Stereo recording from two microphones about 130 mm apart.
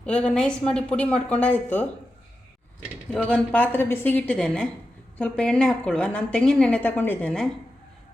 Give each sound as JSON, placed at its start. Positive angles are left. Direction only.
{"t": 0.0, "sound": "a woman's voice", "side_deg": 10}
{"t": 3.1, "sound": "a woman's voice", "side_deg": 10}